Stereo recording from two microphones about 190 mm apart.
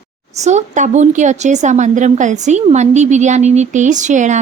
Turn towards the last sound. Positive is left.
turn(degrees=-40)  # may be behind; listen again after turning